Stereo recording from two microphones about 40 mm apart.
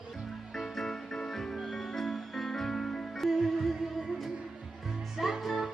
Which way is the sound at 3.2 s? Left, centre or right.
Centre.